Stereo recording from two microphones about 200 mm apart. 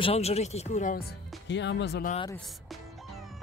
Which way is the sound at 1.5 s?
60° left (ahead or behind).